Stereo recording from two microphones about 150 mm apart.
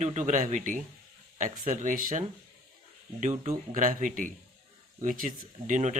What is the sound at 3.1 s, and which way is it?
Speech, 50° right (ahead or behind).